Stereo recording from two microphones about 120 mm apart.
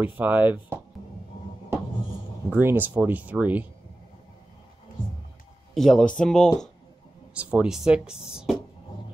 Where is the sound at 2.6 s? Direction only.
15° right (ahead or behind).